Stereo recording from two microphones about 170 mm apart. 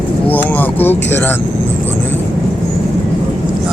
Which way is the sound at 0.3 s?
10° left (ahead or behind).